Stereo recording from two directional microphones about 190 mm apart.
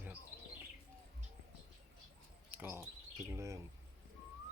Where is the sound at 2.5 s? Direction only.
10° right (ahead or behind).